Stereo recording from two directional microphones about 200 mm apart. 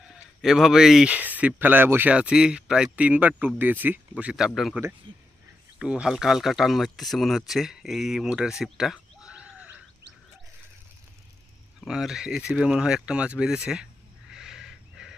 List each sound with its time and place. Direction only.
0.0 s speech: centre (ahead or behind)
5.1 s speech: 25° right (ahead or behind)
5.8 s speech: 5° right (ahead or behind)
11.9 s speech: centre (ahead or behind)
14.3 s a sound: 5° right (ahead or behind)